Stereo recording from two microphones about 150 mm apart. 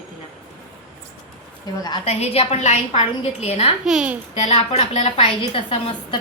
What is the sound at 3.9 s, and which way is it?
Speech, 5° right (ahead or behind).